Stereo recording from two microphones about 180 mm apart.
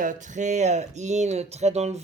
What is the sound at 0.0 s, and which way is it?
Speech, 45° right (ahead or behind).